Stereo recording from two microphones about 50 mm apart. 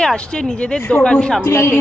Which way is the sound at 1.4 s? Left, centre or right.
Left.